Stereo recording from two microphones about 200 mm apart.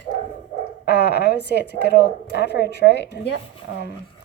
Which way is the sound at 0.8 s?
55° left (ahead or behind).